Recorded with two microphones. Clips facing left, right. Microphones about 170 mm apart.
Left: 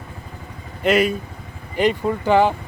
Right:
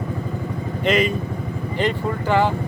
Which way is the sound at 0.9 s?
5° left (ahead or behind).